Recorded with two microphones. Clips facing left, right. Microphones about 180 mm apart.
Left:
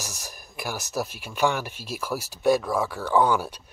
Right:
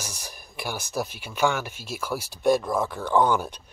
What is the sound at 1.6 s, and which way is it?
Speech, 40° left (ahead or behind).